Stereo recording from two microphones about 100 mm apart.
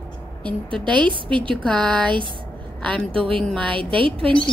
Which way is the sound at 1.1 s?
55° right (ahead or behind).